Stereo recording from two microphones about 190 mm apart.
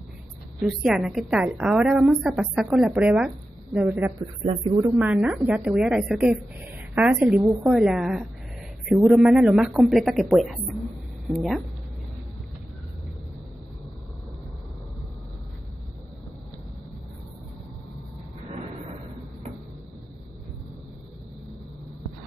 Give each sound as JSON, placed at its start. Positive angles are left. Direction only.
{"t": 0.6, "sound": "a woman's voice", "side_deg": 0}
{"t": 4.2, "sound": "a man's voice", "side_deg": -30}
{"t": 4.9, "sound": "a woman's voice", "side_deg": -5}